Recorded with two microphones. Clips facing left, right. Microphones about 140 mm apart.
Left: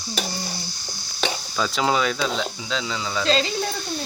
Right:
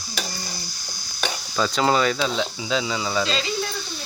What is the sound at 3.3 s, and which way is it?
Speech, 40° left (ahead or behind).